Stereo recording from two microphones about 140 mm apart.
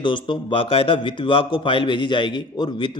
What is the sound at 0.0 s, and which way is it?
A man's voice, 35° left (ahead or behind).